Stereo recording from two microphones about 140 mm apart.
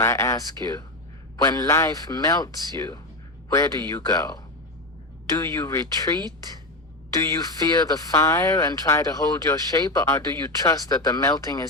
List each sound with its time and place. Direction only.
0.0 s speech: 25° left (ahead or behind)
5.4 s speech: 20° left (ahead or behind)
7.2 s speech: 25° left (ahead or behind)